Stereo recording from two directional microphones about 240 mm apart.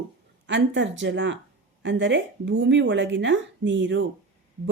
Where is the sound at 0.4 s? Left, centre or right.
Right.